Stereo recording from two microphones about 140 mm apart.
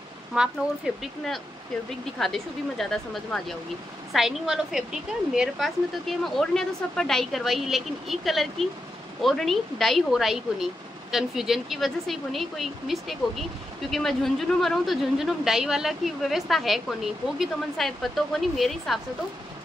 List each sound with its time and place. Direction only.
0.3 s speech: 5° right (ahead or behind)